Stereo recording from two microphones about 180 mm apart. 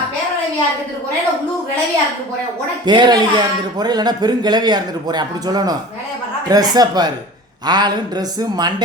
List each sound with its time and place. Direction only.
2.8 s speech: 25° right (ahead or behind)